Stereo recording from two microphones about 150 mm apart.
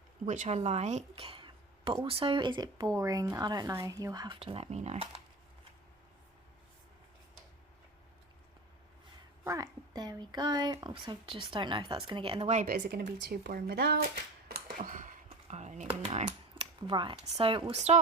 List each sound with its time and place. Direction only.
0.3 s speech: 50° right (ahead or behind); by 4.4 s 25° right (ahead or behind)
4.4 s speech: 40° right (ahead or behind)
9.4 s speech: 20° right (ahead or behind); by 12.5 s 35° right (ahead or behind)
12.6 s speech: 90° right; by 16.2 s 45° right (ahead or behind)
16.2 s a sound: 30° right (ahead or behind)
17.2 s speech: 40° right (ahead or behind)